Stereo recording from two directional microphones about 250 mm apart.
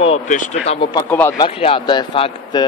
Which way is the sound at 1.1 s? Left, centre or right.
Centre.